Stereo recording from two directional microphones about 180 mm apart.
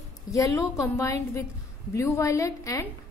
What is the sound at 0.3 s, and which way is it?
A woman's voice, 15° left (ahead or behind).